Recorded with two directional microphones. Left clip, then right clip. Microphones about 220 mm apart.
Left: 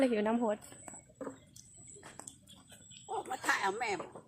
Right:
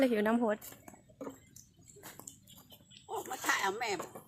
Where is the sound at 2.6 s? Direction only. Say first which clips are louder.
Left 1 dB; 10° left (ahead or behind).